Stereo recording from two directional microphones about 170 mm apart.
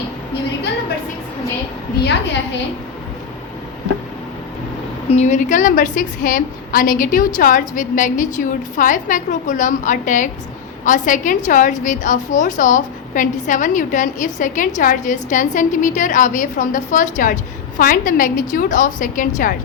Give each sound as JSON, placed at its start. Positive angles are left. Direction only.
{"t": 5.0, "sound": "a woman's voice", "side_deg": 40}